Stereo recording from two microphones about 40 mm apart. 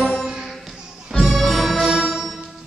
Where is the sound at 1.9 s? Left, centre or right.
Centre.